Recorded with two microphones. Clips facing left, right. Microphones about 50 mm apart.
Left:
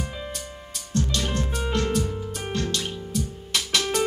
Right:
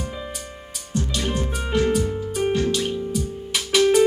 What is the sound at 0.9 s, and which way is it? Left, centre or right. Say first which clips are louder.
Music: right 1 dB; centre.